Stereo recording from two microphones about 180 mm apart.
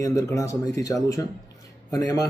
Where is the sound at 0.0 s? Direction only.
20° left (ahead or behind).